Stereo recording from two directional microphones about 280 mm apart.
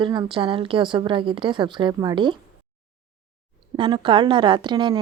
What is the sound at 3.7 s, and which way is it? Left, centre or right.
Speech, centre.